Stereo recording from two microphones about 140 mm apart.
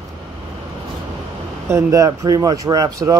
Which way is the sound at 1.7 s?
25° right (ahead or behind).